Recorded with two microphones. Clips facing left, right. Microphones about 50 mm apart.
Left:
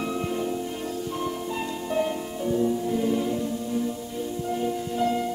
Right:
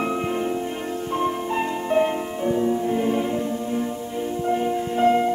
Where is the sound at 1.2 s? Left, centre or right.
Right.